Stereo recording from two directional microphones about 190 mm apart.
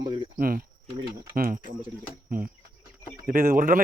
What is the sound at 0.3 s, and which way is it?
Speech, 50° right (ahead or behind).